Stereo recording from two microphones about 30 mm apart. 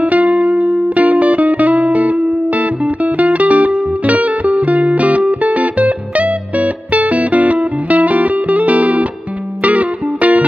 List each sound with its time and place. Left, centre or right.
0.0 s music: right